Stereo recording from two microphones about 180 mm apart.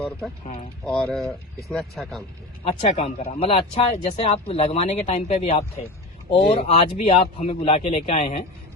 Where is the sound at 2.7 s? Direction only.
35° left (ahead or behind).